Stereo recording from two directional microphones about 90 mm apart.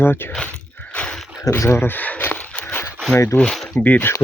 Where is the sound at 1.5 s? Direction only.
30° left (ahead or behind).